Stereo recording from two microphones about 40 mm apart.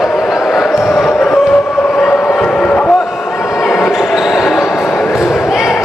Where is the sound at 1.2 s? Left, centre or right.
Centre.